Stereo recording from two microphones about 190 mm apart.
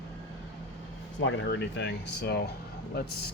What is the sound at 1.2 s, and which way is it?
Speech, 75° left (ahead or behind).